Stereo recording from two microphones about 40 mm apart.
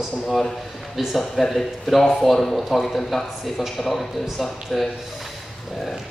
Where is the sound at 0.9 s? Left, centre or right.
Centre.